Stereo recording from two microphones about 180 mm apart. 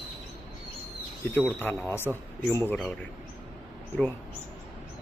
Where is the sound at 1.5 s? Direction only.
10° left (ahead or behind).